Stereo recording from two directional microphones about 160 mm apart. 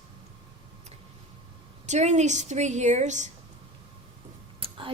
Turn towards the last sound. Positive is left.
turn(degrees=-35)  # may be behind; listen again after turning